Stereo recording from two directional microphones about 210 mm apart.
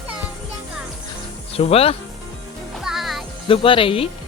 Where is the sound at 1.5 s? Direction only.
30° left (ahead or behind).